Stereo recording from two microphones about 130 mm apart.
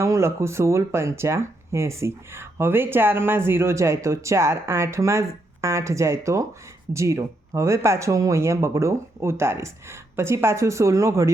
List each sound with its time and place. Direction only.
0.0 s speech: 20° right (ahead or behind)